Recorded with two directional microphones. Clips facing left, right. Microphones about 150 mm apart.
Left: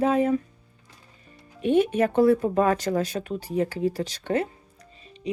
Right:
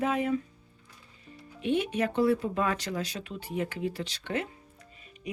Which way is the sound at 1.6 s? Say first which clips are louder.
Left 7 dB; 45° left (ahead or behind).